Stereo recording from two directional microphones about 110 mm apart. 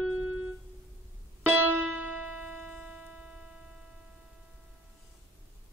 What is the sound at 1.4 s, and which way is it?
Music, 15° right (ahead or behind).